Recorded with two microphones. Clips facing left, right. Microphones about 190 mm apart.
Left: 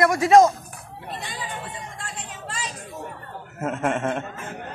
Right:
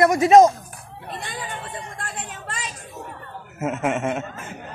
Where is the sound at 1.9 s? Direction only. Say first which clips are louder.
Right 3 dB; 55° right (ahead or behind).